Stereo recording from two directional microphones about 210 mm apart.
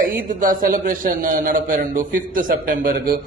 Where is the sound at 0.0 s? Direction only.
40° right (ahead or behind).